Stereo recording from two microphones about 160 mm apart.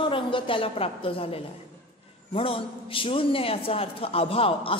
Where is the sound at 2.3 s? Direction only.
35° left (ahead or behind).